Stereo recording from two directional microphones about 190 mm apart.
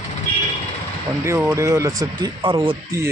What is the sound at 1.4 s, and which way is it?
Speech, 15° right (ahead or behind).